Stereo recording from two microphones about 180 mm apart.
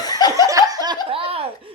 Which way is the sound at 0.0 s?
20° left (ahead or behind).